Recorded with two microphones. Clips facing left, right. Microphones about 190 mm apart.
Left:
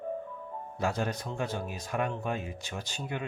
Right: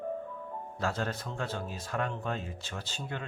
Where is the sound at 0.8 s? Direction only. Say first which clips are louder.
Left 2 dB; 15° left (ahead or behind).